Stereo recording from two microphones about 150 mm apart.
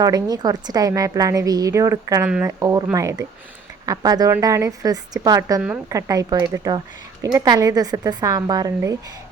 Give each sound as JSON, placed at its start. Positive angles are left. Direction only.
{"t": 0.0, "sound": "a woman's voice", "side_deg": -25}